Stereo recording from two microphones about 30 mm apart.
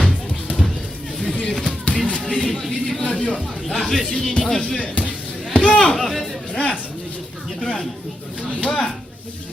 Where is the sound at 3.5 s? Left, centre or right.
Left.